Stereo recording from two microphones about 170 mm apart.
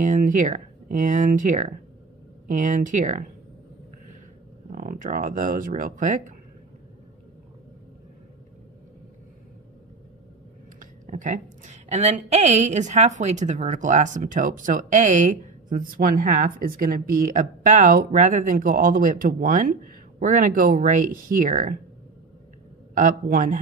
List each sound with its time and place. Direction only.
0.0 s a woman's voice: 50° right (ahead or behind)
4.7 s a woman's voice: 50° right (ahead or behind)
10.8 s a woman's voice: 50° right (ahead or behind)
22.9 s a woman's voice: 55° right (ahead or behind)